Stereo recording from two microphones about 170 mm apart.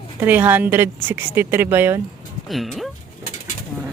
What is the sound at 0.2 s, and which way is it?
A woman's voice, 10° right (ahead or behind).